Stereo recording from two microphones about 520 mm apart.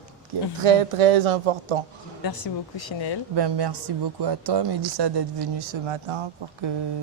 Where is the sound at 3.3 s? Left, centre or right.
Right.